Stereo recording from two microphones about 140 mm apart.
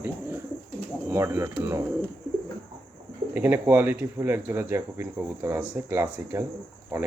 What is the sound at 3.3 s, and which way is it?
Speech, 15° right (ahead or behind).